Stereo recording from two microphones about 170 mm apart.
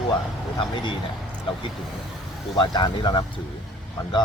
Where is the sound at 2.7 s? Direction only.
25° left (ahead or behind).